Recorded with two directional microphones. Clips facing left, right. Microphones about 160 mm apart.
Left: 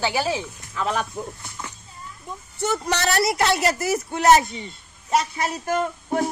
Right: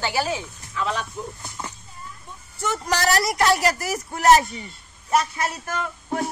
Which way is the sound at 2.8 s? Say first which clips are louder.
Right 2 dB; 25° left (ahead or behind).